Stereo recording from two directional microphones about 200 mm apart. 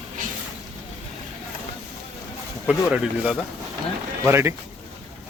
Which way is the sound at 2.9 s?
5° right (ahead or behind).